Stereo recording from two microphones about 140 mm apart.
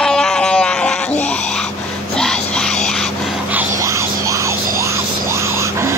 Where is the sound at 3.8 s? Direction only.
20° right (ahead or behind).